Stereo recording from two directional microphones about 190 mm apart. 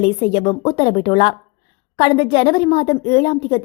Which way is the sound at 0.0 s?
30° left (ahead or behind).